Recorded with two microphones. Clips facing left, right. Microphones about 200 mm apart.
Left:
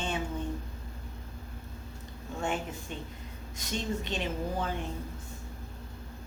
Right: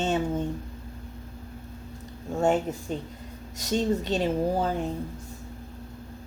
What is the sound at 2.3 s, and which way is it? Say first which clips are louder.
A woman's voice: right 10 dB; 40° right (ahead or behind).